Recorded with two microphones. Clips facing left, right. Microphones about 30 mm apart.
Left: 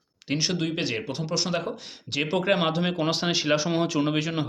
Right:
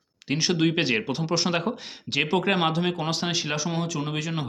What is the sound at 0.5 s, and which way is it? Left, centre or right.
Speech, centre.